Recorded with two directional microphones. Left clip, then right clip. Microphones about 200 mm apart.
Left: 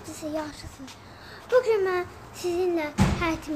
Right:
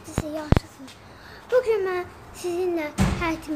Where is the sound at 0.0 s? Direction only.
Centre (ahead or behind).